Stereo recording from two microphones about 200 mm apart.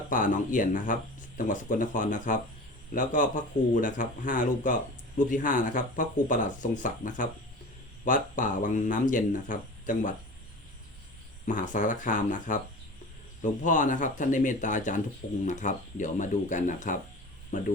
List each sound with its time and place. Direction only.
0.1 s speech: 40° left (ahead or behind)
11.4 s speech: 40° left (ahead or behind)